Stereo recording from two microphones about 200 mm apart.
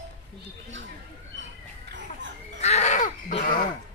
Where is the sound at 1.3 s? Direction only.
65° right (ahead or behind).